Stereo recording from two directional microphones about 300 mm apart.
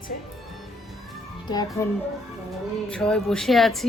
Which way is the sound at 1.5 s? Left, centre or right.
Centre.